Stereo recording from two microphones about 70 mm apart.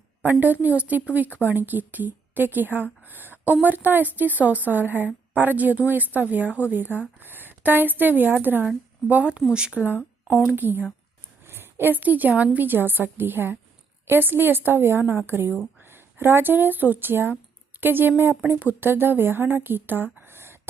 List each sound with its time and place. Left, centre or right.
0.2 s a woman's voice: right
11.4 s a sound: right
12.3 s a woman's voice: right